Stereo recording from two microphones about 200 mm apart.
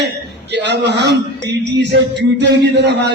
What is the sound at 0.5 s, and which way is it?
A man's voice, 60° right (ahead or behind).